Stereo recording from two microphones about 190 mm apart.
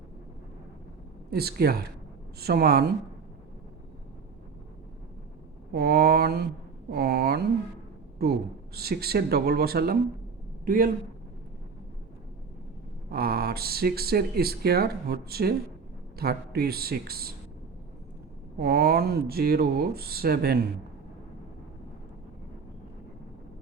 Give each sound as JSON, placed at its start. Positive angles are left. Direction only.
{"t": 1.3, "sound": "speech", "side_deg": -55}
{"t": 5.7, "sound": "speech", "side_deg": -55}
{"t": 8.7, "sound": "speech", "side_deg": -55}
{"t": 13.1, "sound": "speech", "side_deg": -55}
{"t": 18.6, "sound": "speech", "side_deg": -55}